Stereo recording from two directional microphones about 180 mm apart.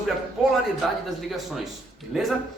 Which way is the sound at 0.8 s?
Centre (ahead or behind).